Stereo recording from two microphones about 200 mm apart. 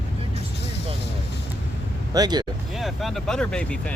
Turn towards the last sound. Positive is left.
turn(degrees=5)  # may be behind; listen again after turning